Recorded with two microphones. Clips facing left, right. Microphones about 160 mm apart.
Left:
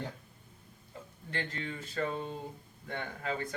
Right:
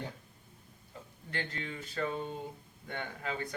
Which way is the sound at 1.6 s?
35° left (ahead or behind).